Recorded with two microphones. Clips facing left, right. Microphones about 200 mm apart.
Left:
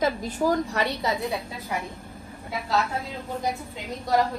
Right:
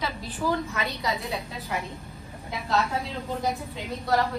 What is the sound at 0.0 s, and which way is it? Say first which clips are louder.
A woman's voice: left 6 dB; 45° left (ahead or behind).